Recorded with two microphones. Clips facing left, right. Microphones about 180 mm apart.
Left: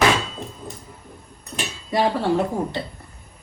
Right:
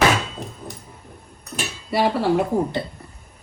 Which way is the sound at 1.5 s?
10° right (ahead or behind).